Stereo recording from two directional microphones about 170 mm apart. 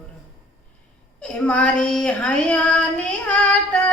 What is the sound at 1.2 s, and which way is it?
Child singing, 5° left (ahead or behind).